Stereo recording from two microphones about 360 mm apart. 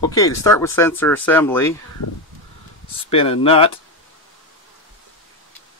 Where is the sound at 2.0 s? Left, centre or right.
Left.